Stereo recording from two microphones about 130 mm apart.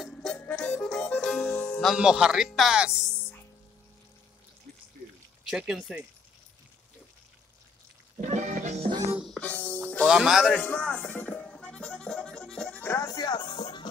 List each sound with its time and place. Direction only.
0.0 s music: 5° left (ahead or behind)
1.9 s speech: 5° right (ahead or behind)
5.5 s speech: 5° right (ahead or behind)
8.2 s music: 70° right (ahead or behind)
9.2 s music: 5° left (ahead or behind)
10.0 s speech: 5° right (ahead or behind)
10.5 s music: 15° left (ahead or behind)
12.8 s speech: 20° left (ahead or behind)
13.1 s music: 30° left (ahead or behind)